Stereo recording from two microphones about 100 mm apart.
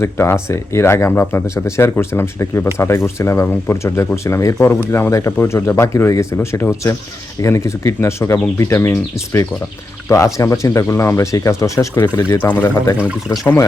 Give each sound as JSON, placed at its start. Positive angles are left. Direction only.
{"t": 0.0, "sound": "speech", "side_deg": 25}
{"t": 10.1, "sound": "speech", "side_deg": 30}
{"t": 12.3, "sound": "speech", "side_deg": 20}